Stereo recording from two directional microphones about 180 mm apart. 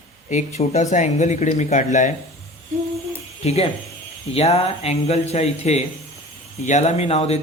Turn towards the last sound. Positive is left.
turn(degrees=35)  # may be behind; listen again after turning